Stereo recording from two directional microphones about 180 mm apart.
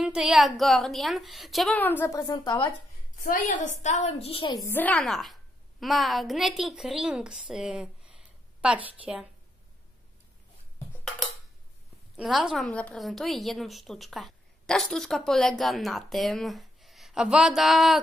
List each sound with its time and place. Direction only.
0.0 s a woman's voice: 5° right (ahead or behind); by 2.7 s 25° left (ahead or behind)
3.2 s a woman's voice: 50° left (ahead or behind); by 4.5 s 30° left (ahead or behind)
4.6 s a woman's voice: 10° left (ahead or behind)
12.2 s a woman's voice: centre (ahead or behind)